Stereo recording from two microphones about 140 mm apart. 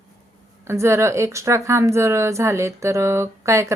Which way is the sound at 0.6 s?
20° right (ahead or behind).